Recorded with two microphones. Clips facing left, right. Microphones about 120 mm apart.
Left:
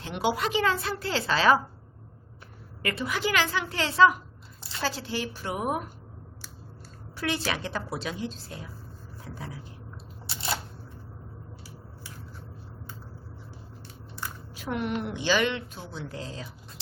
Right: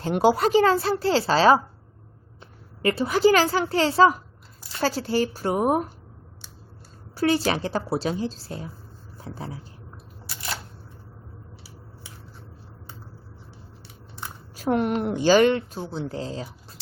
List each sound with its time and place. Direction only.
0.0 s a woman's voice: 40° right (ahead or behind)
2.8 s a woman's voice: 30° right (ahead or behind)
7.2 s a woman's voice: 35° right (ahead or behind)
10.2 s single-lens reflex camera: 25° left (ahead or behind)
14.5 s a woman's voice: 40° right (ahead or behind)